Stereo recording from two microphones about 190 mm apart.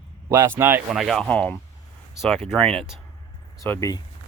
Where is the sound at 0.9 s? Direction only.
Centre (ahead or behind).